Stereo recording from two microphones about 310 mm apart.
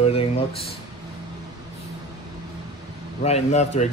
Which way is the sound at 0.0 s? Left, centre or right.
Centre.